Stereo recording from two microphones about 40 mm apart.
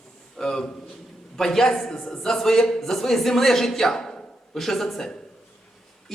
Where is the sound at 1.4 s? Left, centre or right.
Centre.